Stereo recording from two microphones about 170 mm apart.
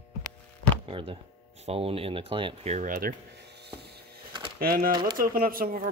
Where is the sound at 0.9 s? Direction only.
30° right (ahead or behind); by 3.1 s 50° right (ahead or behind).